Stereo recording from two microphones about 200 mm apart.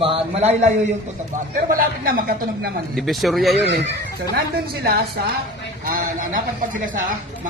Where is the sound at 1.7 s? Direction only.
45° right (ahead or behind).